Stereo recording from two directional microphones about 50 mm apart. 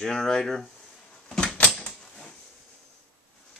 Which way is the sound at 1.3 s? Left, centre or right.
Centre.